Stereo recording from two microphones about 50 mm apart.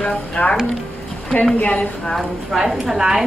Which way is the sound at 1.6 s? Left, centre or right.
Left.